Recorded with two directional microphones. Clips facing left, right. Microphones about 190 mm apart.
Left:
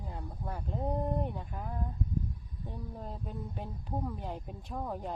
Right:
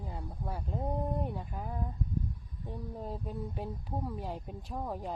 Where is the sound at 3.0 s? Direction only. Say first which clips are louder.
Right 3 dB; 5° right (ahead or behind).